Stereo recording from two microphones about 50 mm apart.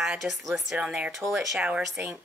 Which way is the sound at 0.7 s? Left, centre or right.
Right.